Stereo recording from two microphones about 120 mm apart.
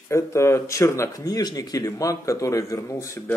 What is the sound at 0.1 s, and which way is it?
Speech, 25° left (ahead or behind).